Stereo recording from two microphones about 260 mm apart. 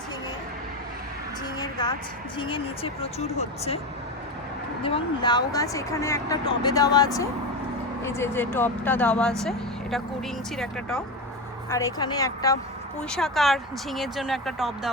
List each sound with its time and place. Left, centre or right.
1.5 s a woman's voice: centre
4.8 s speech: left; by 11.0 s centre
11.7 s speech: centre
13.0 s speech: centre